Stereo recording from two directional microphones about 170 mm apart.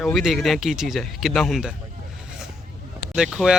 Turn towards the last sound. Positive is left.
turn(degrees=-5)  # may be behind; listen again after turning